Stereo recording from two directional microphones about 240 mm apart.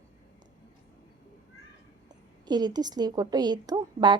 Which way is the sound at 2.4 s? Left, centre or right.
Centre.